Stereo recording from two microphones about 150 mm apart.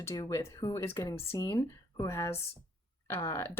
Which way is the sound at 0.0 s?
20° left (ahead or behind).